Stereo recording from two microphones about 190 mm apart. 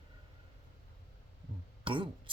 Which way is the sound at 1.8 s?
25° right (ahead or behind).